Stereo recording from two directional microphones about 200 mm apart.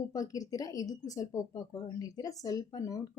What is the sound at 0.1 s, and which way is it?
Speech, 20° left (ahead or behind).